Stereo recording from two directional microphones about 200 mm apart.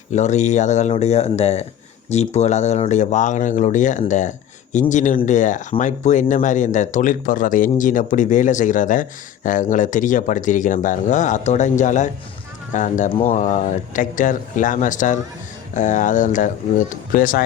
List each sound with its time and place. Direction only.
0.1 s speech: 35° left (ahead or behind)